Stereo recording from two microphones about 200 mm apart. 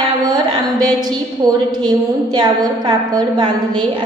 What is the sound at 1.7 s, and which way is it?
A woman's voice, 20° right (ahead or behind).